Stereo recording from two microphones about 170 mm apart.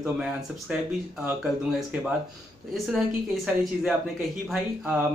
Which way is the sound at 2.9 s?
Centre (ahead or behind).